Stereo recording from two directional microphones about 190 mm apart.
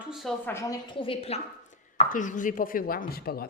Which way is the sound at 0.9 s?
30° left (ahead or behind).